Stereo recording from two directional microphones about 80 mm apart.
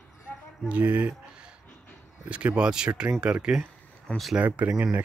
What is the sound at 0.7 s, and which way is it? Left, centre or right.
Speech, centre.